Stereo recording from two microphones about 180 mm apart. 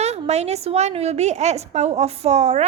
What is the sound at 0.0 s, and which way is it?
A woman's voice, 35° right (ahead or behind).